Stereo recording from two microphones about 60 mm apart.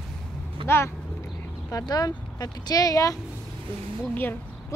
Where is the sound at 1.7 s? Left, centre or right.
Left.